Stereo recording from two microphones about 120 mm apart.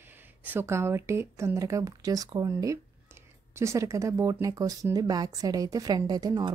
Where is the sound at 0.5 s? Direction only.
20° right (ahead or behind).